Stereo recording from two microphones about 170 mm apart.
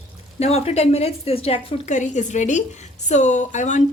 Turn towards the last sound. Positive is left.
turn(degrees=45)  # may be behind; listen again after turning